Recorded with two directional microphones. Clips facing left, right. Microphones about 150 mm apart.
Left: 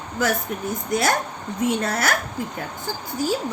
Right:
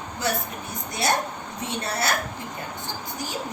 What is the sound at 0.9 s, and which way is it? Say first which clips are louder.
Speech: left 4 dB; 90° left.